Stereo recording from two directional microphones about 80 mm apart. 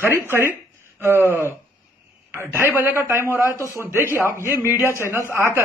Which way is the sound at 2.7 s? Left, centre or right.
Right.